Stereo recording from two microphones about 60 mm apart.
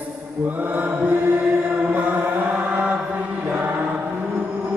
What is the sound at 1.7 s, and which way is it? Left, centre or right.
Chant, right.